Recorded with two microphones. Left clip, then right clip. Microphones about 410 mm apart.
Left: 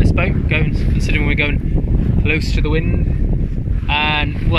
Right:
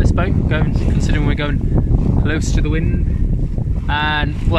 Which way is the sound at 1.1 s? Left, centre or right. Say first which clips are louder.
Left 6 dB; centre.